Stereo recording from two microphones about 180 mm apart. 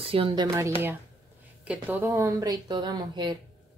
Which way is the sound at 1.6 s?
10° right (ahead or behind).